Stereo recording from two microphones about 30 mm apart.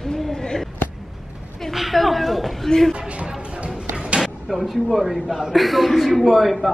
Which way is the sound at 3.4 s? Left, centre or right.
Right.